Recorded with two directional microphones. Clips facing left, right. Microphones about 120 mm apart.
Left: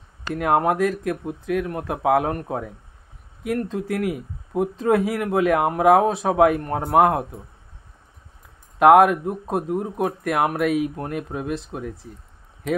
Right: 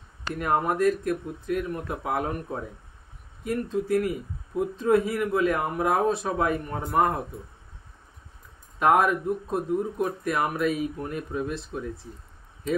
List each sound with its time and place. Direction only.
0.3 s speech: 75° left (ahead or behind)
8.7 s speech: 70° left (ahead or behind)